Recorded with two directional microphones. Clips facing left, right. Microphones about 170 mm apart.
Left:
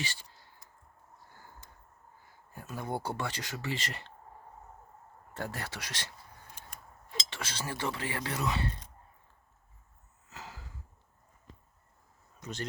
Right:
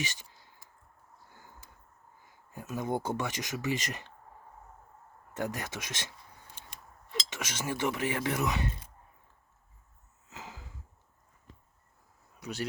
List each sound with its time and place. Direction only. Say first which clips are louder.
0.0 s a sound: right 2 dB; 15° right (ahead or behind)
2.2 s speech: right 4 dB; 15° right (ahead or behind)
5.3 s speech: right 4 dB; 15° right (ahead or behind)
7.3 s speech: right 3 dB; 20° right (ahead or behind)
10.2 s a sound: right 1 dB; 15° right (ahead or behind)
12.4 s speech: right 3 dB; 10° right (ahead or behind)